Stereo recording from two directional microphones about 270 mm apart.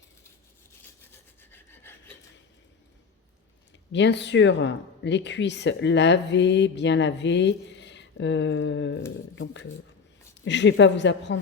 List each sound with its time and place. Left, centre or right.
1.1 s filing: centre
3.9 s speech: left